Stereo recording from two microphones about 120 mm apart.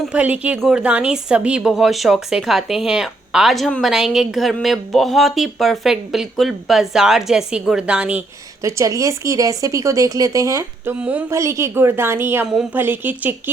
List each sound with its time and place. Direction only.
0.0 s speech: 10° right (ahead or behind)
8.6 s speech: 25° right (ahead or behind)